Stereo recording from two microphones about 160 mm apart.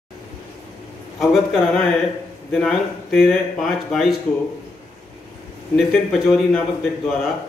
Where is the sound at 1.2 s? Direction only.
Centre (ahead or behind).